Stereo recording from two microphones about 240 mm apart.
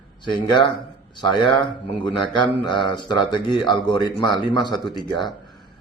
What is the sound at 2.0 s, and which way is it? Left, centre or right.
Speech, centre.